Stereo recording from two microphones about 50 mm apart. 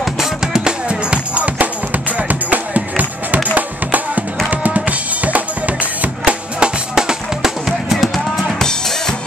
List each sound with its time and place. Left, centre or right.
0.0 s music: centre
0.8 s music: right
4.5 s drum: right; by 7.5 s centre
7.6 s music: centre
8.5 s drum kit: centre